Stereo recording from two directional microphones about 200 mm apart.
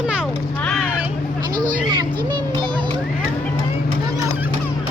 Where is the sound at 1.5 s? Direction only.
45° right (ahead or behind).